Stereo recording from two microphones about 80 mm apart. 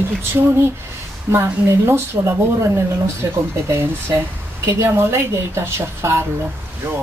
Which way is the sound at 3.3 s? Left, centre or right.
Right.